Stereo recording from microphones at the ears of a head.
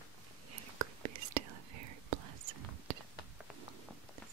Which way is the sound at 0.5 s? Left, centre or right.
Right.